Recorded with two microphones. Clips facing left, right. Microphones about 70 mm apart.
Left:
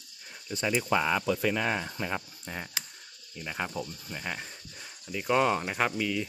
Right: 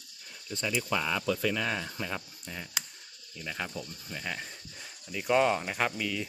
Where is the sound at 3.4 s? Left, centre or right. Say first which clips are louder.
Left 3 dB; left.